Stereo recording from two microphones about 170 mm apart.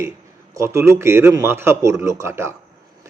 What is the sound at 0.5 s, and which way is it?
Speech, 15° right (ahead or behind).